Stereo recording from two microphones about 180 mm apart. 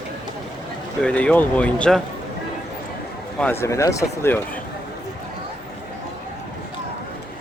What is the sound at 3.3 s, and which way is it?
Speech, 10° left (ahead or behind).